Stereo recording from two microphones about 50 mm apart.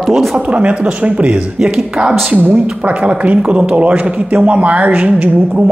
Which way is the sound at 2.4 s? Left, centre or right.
Right.